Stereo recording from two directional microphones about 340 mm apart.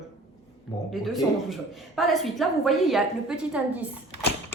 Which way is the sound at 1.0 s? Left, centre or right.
Centre.